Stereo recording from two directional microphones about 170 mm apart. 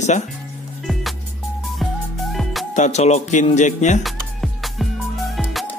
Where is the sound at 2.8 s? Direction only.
40° left (ahead or behind).